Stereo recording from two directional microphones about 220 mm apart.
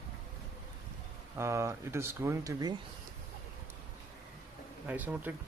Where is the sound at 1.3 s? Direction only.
15° right (ahead or behind).